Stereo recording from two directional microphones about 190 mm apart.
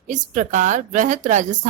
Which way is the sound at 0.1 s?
40° right (ahead or behind).